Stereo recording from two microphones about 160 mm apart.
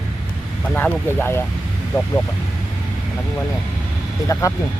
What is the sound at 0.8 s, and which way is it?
Speech, 10° left (ahead or behind).